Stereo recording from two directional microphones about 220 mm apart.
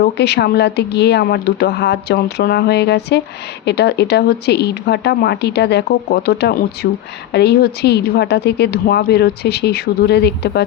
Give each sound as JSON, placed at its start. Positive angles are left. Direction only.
{"t": 0.0, "sound": "a woman's voice", "side_deg": 50}